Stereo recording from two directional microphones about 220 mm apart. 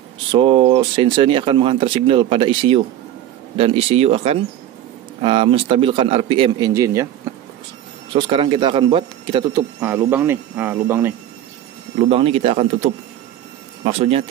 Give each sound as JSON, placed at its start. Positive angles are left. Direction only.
{"t": 0.3, "sound": "speech", "side_deg": -25}
{"t": 8.1, "sound": "speech", "side_deg": -25}
{"t": 12.1, "sound": "speech", "side_deg": -25}
{"t": 13.8, "sound": "speech", "side_deg": -25}